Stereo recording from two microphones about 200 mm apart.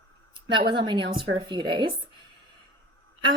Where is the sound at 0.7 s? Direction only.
25° right (ahead or behind).